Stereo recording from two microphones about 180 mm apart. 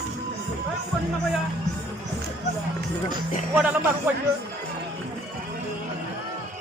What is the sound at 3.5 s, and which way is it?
Speech, 10° right (ahead or behind).